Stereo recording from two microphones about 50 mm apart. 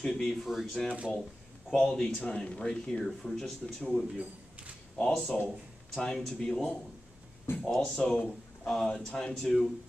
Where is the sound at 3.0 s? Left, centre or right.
Centre.